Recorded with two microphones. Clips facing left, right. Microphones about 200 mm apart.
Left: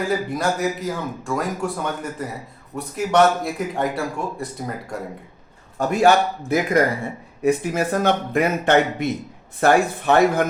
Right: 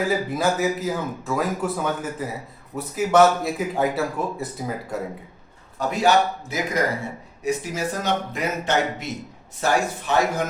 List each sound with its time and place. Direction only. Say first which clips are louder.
0.1 s speech: even; centre (ahead or behind)
5.7 s a man's voice: left 3 dB; 50° left (ahead or behind)